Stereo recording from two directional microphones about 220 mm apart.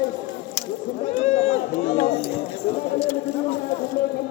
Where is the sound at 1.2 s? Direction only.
30° left (ahead or behind).